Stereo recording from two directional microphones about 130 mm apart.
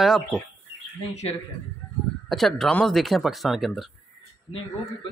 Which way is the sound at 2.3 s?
Centre (ahead or behind).